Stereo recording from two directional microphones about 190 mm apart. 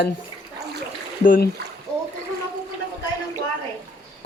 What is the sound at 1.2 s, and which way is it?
Speech, 45° left (ahead or behind).